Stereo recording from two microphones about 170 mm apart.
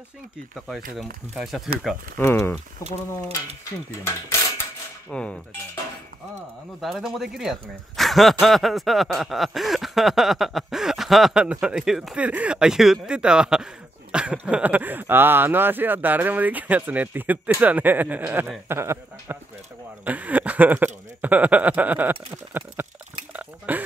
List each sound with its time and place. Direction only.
0.9 s speech: centre (ahead or behind)
2.3 s speech: 10° left (ahead or behind)
5.1 s speech: 5° left (ahead or behind)
6.8 s speech: centre (ahead or behind)
23.3 s a sound: 10° right (ahead or behind)